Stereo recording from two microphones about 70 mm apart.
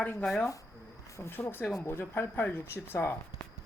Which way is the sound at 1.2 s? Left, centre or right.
Left.